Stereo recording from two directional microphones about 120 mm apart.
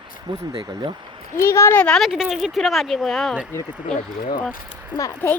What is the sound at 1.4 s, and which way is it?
Speech, 25° left (ahead or behind).